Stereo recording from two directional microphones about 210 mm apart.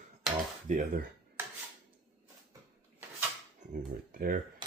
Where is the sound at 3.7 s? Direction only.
45° right (ahead or behind).